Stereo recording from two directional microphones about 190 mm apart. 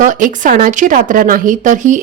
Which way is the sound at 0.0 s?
40° right (ahead or behind).